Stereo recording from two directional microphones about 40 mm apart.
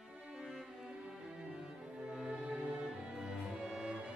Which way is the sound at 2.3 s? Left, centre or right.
Right.